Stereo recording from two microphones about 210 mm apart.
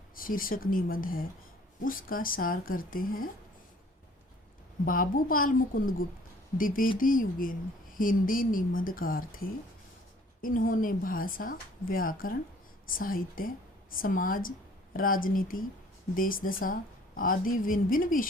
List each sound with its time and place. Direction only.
0.2 s speech: 40° left (ahead or behind)
4.9 s speech: 40° left (ahead or behind)
10.4 s speech: 40° left (ahead or behind)